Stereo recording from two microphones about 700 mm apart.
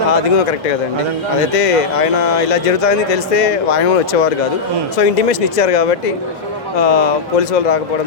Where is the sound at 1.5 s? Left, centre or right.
Left.